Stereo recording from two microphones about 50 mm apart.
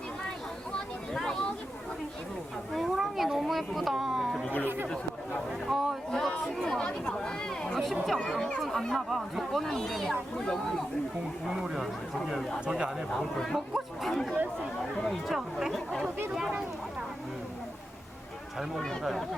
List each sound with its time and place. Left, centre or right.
1.1 s a sound: centre
2.7 s cat: centre
5.6 s a sound: centre
6.1 s chatter: centre
7.1 s a sound: centre
8.6 s speech: centre
9.0 s speech: centre
10.3 s speech: centre
11.4 s speech: centre
13.1 s speech: centre
13.7 s chatter: centre
15.0 s speech: centre